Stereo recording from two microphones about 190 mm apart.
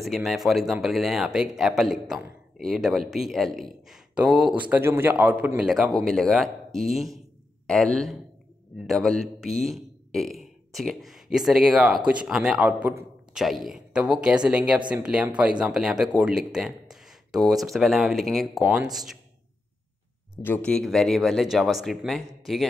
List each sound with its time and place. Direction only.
0.0 s a man's voice: centre (ahead or behind)
20.4 s a man's voice: 10° left (ahead or behind)